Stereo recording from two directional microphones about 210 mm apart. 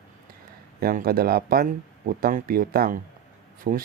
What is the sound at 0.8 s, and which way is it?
Speech, 45° right (ahead or behind).